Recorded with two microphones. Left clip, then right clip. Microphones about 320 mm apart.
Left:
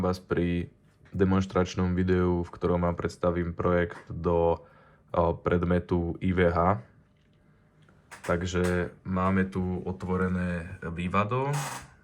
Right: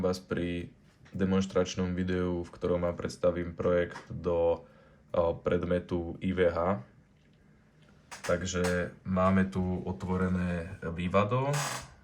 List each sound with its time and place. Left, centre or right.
0.0 s speech: left
8.3 s speech: centre
9.0 s speech: centre